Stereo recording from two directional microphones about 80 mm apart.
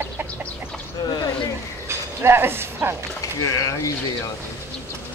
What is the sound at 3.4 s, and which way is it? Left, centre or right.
Speech, left.